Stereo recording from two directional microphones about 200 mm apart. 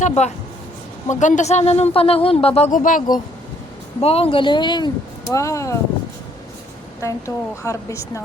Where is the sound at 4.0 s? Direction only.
30° left (ahead or behind).